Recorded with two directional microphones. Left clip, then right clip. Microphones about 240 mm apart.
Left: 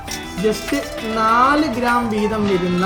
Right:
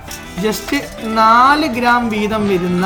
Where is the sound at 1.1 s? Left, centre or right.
Right.